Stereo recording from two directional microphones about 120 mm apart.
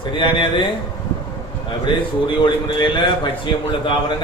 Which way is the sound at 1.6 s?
45° left (ahead or behind).